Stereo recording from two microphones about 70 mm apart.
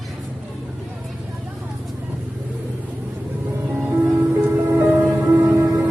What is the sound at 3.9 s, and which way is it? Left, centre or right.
Music, right.